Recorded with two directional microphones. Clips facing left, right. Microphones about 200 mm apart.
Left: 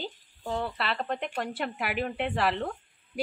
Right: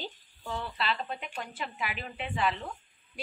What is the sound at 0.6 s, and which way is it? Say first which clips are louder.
Speech: left 2 dB; 60° left (ahead or behind).